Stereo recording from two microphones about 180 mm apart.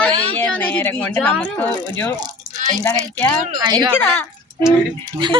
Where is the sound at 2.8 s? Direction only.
10° left (ahead or behind).